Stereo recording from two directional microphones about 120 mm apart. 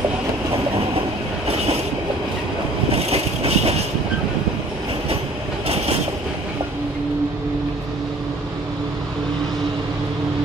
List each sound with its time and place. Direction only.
1.5 s train: 60° right (ahead or behind)
2.9 s train: 60° right (ahead or behind)